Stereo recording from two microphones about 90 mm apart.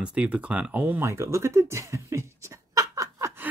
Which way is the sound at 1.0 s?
30° right (ahead or behind).